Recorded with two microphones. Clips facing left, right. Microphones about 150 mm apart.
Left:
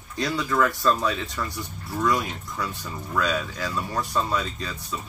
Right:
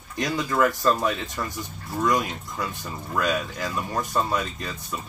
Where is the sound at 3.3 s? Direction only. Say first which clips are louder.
Right 1 dB; 15° right (ahead or behind).